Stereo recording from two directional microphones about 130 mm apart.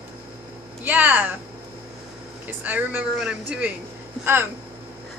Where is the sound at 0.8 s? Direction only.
15° right (ahead or behind).